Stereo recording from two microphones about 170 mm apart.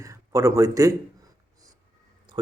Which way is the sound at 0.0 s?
20° right (ahead or behind).